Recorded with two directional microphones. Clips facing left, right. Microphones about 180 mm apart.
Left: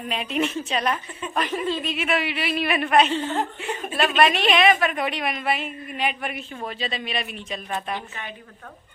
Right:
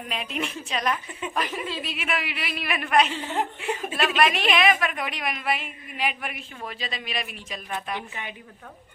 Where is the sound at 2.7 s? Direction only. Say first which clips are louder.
Left 2 dB; 30° left (ahead or behind).